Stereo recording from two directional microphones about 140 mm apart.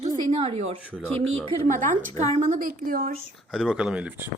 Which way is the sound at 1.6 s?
65° right (ahead or behind).